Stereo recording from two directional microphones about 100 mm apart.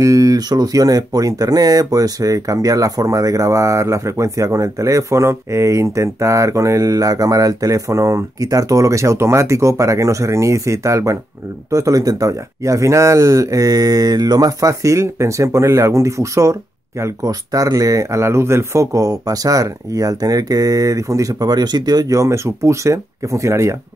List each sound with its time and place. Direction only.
0.0 s speech: 35° right (ahead or behind)